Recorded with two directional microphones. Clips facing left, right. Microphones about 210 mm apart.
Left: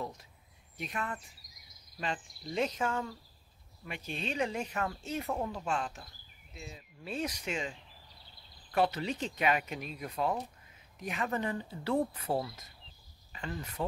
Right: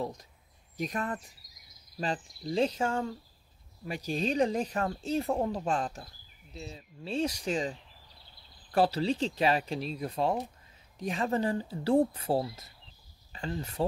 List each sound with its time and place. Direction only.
0.0 s speech: 35° right (ahead or behind)
8.7 s speech: 30° right (ahead or behind)